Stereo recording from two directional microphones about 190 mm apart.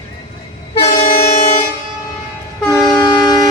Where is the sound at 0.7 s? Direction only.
30° left (ahead or behind).